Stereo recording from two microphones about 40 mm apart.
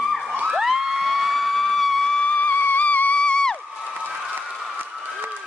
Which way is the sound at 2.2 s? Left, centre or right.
Left.